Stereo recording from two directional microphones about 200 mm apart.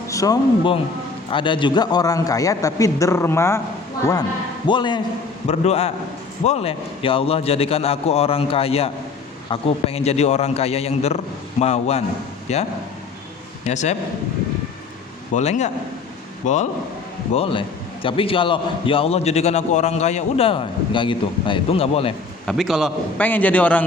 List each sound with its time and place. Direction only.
0.1 s a man's voice: 15° left (ahead or behind); by 12.6 s 35° left (ahead or behind)
13.7 s a man's voice: 35° left (ahead or behind)
15.4 s a man's voice: 35° left (ahead or behind)
17.3 s a man's voice: 25° left (ahead or behind)
22.4 s a man's voice: centre (ahead or behind)